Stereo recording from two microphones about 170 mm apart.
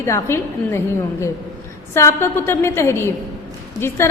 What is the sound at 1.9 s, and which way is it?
A woman's voice, 15° left (ahead or behind).